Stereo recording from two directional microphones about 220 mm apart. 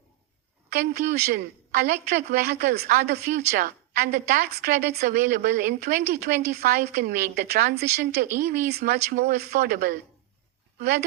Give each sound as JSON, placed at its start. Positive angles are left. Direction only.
{"t": 0.7, "sound": "a woman's voice", "side_deg": -45}